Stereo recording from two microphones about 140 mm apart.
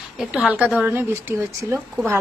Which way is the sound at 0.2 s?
5° right (ahead or behind).